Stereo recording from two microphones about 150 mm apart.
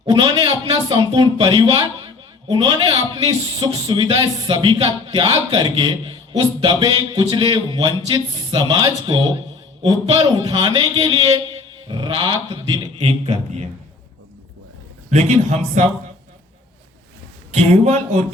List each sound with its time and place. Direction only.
0.0 s a man's voice: 30° right (ahead or behind)
13.0 s speech: 40° right (ahead or behind)
15.1 s speech: 50° right (ahead or behind)
17.5 s speech: 50° right (ahead or behind)